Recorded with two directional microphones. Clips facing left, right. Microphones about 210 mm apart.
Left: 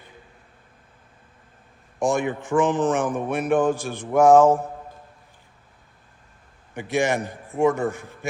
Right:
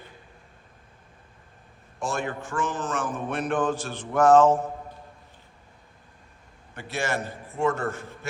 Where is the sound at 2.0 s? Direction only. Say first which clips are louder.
Left 7 dB; 15° left (ahead or behind).